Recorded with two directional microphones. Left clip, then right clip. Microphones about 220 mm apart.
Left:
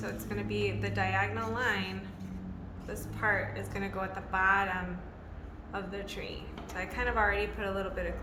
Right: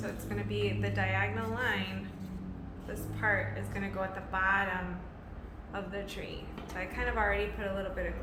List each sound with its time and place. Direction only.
0.0 s a woman's voice: 20° left (ahead or behind)
2.9 s a woman's voice: 25° left (ahead or behind)